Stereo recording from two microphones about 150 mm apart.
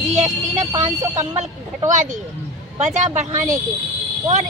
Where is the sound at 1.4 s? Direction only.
55° right (ahead or behind).